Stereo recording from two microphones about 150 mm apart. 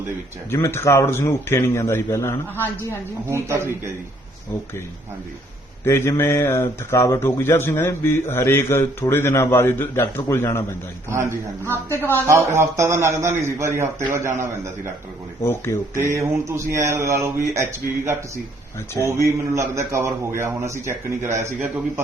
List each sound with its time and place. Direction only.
0.5 s speech: 15° left (ahead or behind)
3.2 s a man's voice: 20° right (ahead or behind)
5.8 s speech: 20° left (ahead or behind)
11.1 s a man's voice: 15° right (ahead or behind)
11.7 s speech: 15° left (ahead or behind)
12.3 s a man's voice: 20° right (ahead or behind)
15.4 s speech: 15° left (ahead or behind)
16.1 s a man's voice: 20° right (ahead or behind)